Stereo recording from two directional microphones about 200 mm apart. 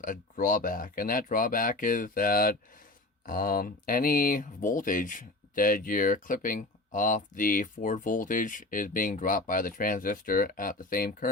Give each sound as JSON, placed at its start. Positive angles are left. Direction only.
{"t": 0.0, "sound": "speech", "side_deg": 45}